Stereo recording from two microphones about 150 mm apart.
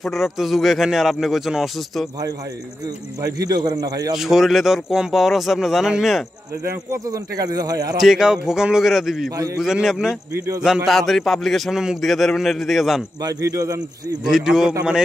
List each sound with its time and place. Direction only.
0.0 s a man's voice: centre (ahead or behind)
3.2 s speech: 25° right (ahead or behind)
4.2 s a man's voice: centre (ahead or behind)
6.7 s speech: 20° right (ahead or behind)
8.0 s a man's voice: 5° right (ahead or behind)
10.3 s speech: 20° right (ahead or behind)
10.9 s a man's voice: centre (ahead or behind)
13.2 s speech: 20° right (ahead or behind)
14.2 s a man's voice: 5° right (ahead or behind)